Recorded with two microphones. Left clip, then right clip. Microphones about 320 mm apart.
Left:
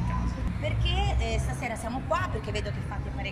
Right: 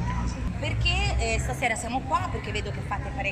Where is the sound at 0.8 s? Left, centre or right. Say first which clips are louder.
Right 6 dB; left.